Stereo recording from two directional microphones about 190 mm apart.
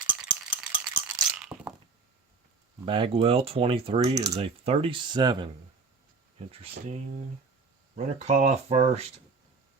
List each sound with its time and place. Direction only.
0.5 s a sound: 5° right (ahead or behind)
2.8 s speech: 25° right (ahead or behind)
6.5 s speech: 30° right (ahead or behind)
7.9 s speech: 35° right (ahead or behind)